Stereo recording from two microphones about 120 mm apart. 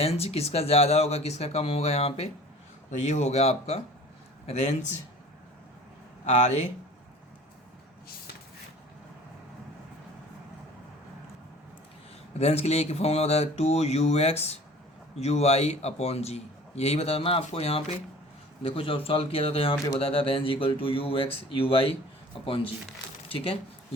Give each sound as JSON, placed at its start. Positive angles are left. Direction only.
{"t": 0.0, "sound": "a man's voice", "side_deg": 55}
{"t": 3.0, "sound": "a man's voice", "side_deg": 75}
{"t": 4.4, "sound": "a man's voice", "side_deg": 70}
{"t": 6.2, "sound": "a man's voice", "side_deg": 70}
{"t": 12.4, "sound": "a man's voice", "side_deg": 60}